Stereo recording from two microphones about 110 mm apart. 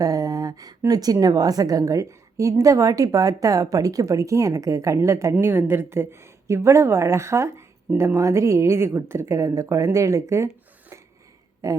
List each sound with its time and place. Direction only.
0.0 s a woman's voice: 35° right (ahead or behind)